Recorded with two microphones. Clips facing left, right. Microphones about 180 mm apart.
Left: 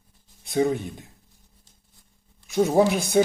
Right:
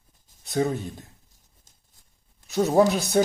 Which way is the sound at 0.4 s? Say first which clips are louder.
Left 2 dB; 15° left (ahead or behind).